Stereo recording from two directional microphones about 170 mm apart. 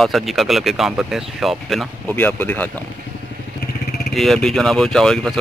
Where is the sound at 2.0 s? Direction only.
10° left (ahead or behind).